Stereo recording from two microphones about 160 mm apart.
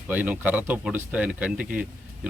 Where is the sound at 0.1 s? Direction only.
10° right (ahead or behind).